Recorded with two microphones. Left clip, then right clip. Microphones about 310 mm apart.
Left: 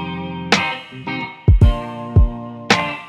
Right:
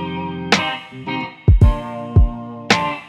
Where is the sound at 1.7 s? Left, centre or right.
Centre.